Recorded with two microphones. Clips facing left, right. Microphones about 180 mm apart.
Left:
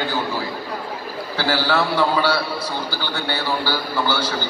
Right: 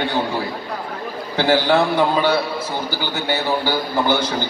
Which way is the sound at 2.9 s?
15° right (ahead or behind).